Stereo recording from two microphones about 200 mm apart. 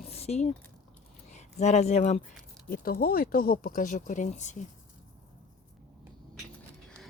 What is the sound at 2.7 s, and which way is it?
Speech, 45° left (ahead or behind).